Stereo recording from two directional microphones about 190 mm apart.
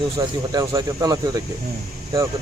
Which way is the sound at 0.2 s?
20° right (ahead or behind).